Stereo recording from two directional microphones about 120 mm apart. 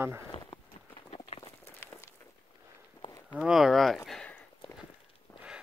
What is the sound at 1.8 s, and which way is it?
Walk, 20° left (ahead or behind).